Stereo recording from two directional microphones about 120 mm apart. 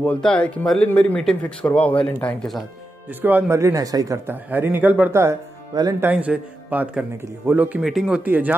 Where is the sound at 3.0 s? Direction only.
15° right (ahead or behind).